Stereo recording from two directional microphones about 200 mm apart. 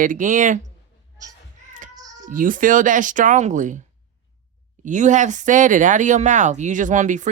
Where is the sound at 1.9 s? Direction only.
20° right (ahead or behind).